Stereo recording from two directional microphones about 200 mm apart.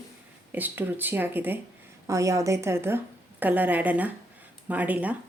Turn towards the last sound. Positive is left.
turn(degrees=-5)  # may be behind; listen again after turning